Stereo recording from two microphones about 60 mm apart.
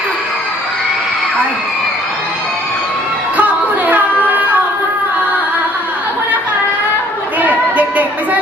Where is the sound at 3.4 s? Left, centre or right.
Right.